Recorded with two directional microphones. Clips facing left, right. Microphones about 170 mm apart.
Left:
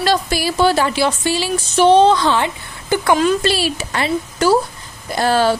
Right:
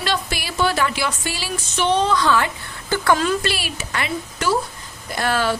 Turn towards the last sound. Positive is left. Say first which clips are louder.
# left 6 dB
turn(degrees=30)  # may be behind; listen again after turning